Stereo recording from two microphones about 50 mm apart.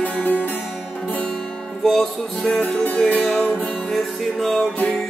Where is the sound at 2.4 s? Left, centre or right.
Left.